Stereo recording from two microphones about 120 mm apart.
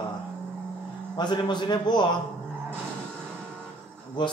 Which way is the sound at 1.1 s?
40° left (ahead or behind).